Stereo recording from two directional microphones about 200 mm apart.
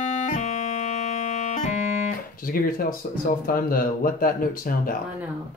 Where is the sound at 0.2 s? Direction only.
35° left (ahead or behind).